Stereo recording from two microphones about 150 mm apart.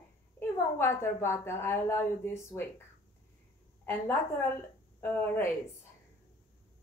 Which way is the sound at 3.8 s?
15° left (ahead or behind).